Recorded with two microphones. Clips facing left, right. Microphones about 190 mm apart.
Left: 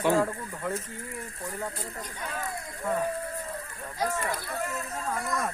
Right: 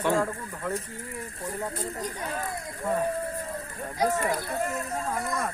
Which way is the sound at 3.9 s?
20° right (ahead or behind).